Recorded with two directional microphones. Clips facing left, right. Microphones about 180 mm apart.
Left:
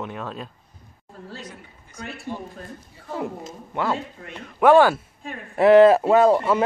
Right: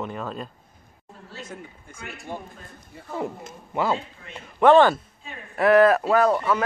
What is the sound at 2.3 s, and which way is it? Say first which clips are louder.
Speech: left 2 dB; 50° right (ahead or behind).